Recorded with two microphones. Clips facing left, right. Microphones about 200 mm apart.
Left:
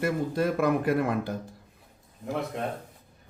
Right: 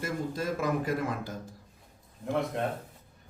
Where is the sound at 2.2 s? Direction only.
Centre (ahead or behind).